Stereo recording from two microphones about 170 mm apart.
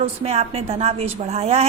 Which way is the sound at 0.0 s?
40° right (ahead or behind).